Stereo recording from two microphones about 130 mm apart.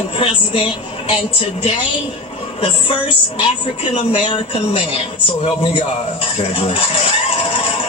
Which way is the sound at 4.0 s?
50° left (ahead or behind).